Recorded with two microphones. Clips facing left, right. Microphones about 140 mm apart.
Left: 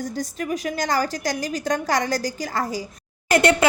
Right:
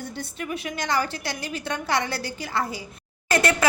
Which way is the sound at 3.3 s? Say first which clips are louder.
Left 5 dB; 25° left (ahead or behind).